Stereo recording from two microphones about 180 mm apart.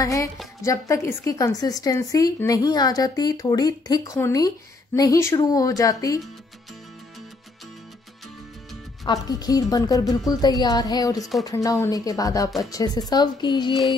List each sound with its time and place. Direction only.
0.0 s speech: 20° left (ahead or behind)
9.0 s speech: 20° left (ahead or behind)